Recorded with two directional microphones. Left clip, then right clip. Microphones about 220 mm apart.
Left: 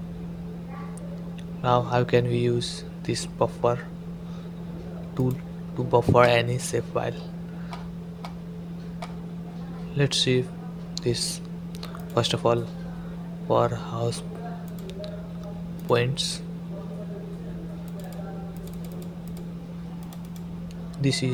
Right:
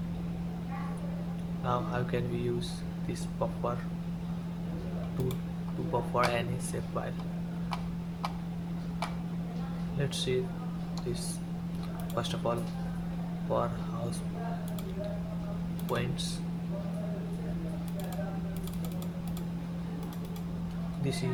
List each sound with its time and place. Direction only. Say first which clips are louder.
1.6 s speech: left 10 dB; 40° left (ahead or behind)
5.9 s speech: left 11 dB; 45° left (ahead or behind)
10.0 s speech: left 11 dB; 40° left (ahead or behind)
12.1 s speech: left 10 dB; 40° left (ahead or behind)
15.9 s speech: left 11 dB; 45° left (ahead or behind)
21.0 s speech: left 10 dB; 40° left (ahead or behind)